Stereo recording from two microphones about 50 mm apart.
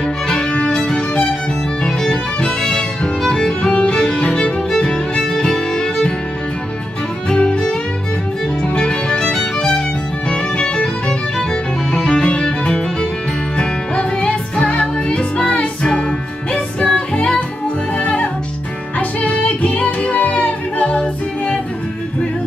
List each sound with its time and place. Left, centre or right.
0.0 s music: centre
7.2 s music: centre
8.6 s music: centre